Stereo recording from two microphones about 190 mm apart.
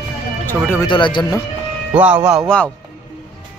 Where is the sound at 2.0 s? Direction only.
5° right (ahead or behind).